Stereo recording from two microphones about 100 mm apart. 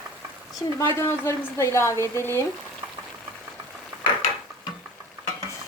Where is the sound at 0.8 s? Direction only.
25° left (ahead or behind).